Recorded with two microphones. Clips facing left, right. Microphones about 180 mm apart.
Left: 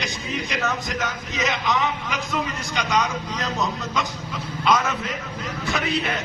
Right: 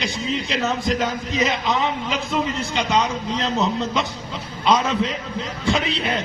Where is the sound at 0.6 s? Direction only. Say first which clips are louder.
Right 6 dB; 20° right (ahead or behind).